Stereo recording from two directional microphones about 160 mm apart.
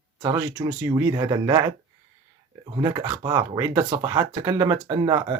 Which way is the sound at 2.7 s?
25° right (ahead or behind).